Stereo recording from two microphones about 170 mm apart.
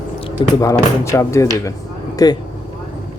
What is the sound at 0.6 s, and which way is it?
Speech, 20° left (ahead or behind).